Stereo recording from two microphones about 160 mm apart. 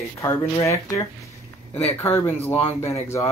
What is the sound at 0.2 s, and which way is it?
Speech, 20° left (ahead or behind).